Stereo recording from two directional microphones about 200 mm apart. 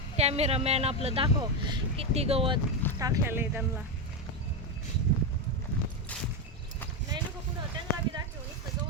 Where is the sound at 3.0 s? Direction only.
15° right (ahead or behind).